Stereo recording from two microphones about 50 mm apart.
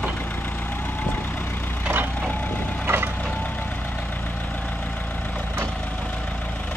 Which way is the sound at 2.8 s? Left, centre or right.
Right.